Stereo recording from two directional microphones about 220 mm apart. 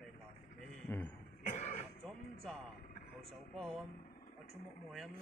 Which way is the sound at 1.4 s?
30° left (ahead or behind).